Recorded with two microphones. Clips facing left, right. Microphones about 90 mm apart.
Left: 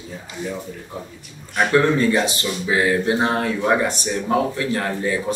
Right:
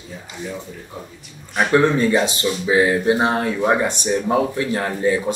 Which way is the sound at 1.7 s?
20° right (ahead or behind).